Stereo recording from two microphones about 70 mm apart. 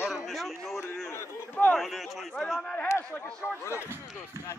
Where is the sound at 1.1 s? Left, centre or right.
Left.